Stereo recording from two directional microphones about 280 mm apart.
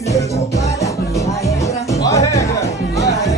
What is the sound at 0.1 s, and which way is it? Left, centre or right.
Music, centre.